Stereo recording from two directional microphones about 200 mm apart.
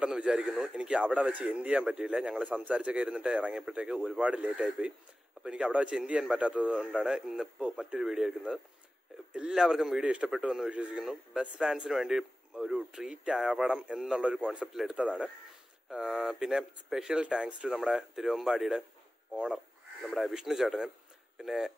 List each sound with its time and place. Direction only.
0.0 s a man's voice: 5° right (ahead or behind)